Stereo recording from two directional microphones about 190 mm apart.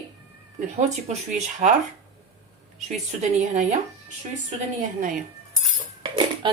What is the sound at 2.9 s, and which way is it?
Speech, 40° right (ahead or behind).